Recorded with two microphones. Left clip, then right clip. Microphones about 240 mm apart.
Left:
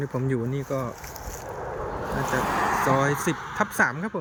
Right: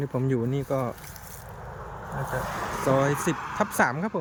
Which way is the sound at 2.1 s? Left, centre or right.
Left.